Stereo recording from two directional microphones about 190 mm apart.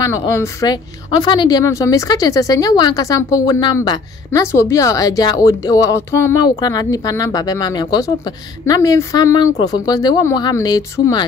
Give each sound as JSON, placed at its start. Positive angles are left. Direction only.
{"t": 0.0, "sound": "a woman's voice", "side_deg": 15}